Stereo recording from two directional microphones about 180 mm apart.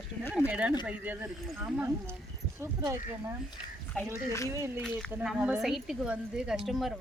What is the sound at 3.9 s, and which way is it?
Speech, 5° left (ahead or behind).